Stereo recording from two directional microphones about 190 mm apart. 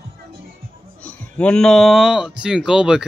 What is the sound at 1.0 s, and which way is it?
Speech, 5° left (ahead or behind).